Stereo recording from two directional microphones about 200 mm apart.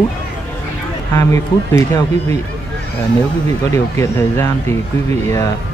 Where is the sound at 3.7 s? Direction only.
15° left (ahead or behind).